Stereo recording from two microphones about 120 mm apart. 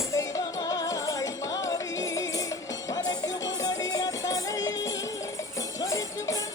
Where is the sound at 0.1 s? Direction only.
30° left (ahead or behind).